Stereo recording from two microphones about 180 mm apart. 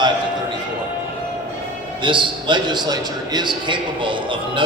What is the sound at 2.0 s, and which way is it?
A man's voice, 25° right (ahead or behind).